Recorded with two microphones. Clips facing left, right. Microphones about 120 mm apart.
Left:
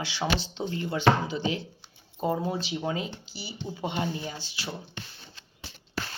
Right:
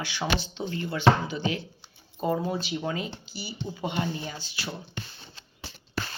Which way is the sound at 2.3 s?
30° left (ahead or behind).